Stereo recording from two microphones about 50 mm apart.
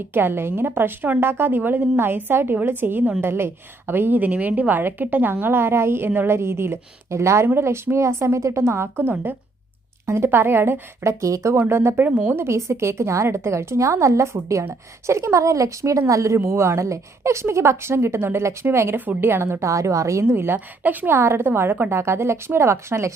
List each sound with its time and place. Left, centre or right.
0.1 s a woman's voice: right
10.1 s speech: right
11.0 s a woman's voice: right
11.5 s a woman's voice: right
11.9 s a woman's voice: right
12.3 s a woman's voice: right
16.4 s a woman's voice: right
17.4 s a woman's voice: right
18.9 s a woman's voice: right
20.2 s speech: right
21.1 s a woman's voice: right